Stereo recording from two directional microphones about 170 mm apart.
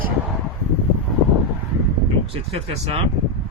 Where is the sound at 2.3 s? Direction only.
35° right (ahead or behind).